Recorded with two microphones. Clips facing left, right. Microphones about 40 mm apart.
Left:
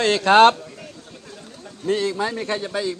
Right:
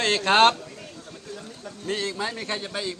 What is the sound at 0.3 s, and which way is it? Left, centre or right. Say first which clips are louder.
Speech: left 5 dB; left.